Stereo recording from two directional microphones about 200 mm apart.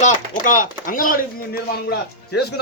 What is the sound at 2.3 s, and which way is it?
Speech, 55° left (ahead or behind).